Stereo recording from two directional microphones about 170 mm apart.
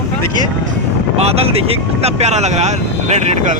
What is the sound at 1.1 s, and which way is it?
Speech, 35° right (ahead or behind).